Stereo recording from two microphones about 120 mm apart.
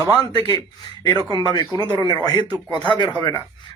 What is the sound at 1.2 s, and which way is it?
Speech, 45° right (ahead or behind).